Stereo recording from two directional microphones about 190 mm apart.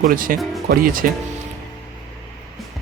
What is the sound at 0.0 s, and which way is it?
Speech, 45° right (ahead or behind).